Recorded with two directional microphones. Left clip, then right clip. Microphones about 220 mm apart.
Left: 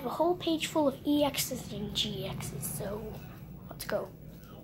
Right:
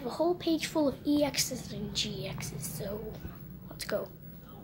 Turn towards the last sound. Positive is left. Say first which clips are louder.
# even
turn(degrees=-10)  # may be behind; listen again after turning